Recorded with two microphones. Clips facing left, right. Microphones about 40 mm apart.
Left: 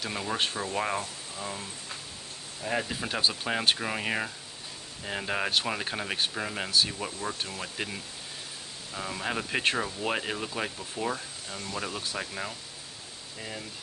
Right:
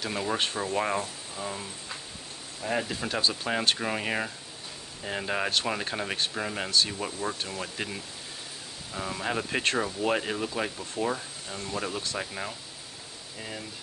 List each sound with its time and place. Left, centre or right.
0.0 s speech: centre